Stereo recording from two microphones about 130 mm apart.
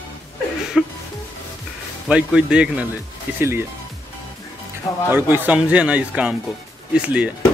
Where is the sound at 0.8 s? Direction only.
5° right (ahead or behind).